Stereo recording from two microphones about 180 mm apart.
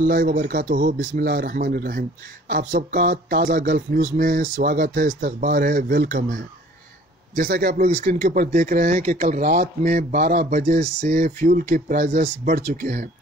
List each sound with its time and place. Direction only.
0.0 s speech: 50° right (ahead or behind)